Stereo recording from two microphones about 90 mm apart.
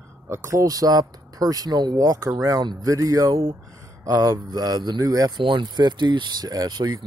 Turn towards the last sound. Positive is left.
turn(degrees=-55)  # may be behind; listen again after turning